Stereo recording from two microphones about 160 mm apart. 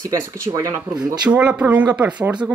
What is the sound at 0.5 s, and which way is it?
Speech, 20° right (ahead or behind).